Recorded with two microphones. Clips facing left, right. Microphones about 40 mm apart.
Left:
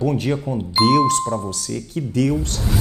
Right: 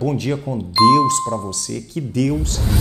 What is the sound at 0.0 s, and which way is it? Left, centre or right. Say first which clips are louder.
A man's voice: even; centre.